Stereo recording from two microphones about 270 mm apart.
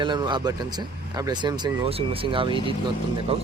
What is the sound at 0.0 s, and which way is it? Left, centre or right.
Speech, centre.